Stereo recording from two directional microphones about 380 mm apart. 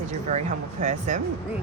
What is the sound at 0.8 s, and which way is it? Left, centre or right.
Speech, centre.